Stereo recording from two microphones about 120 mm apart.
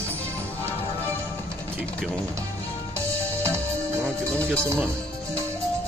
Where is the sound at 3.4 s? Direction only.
20° right (ahead or behind).